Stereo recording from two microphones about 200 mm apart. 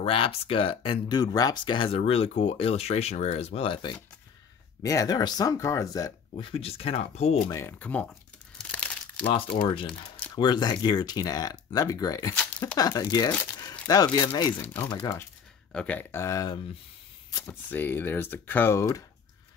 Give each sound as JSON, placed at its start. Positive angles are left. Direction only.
{"t": 0.0, "sound": "speech", "side_deg": 25}
{"t": 7.4, "sound": "speech", "side_deg": 15}
{"t": 8.5, "sound": "crumpling", "side_deg": 5}
{"t": 9.8, "sound": "a sound", "side_deg": 5}
{"t": 10.3, "sound": "speech", "side_deg": 20}